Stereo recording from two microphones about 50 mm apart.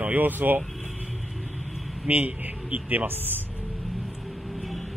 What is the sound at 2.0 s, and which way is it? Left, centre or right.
A man's voice, right.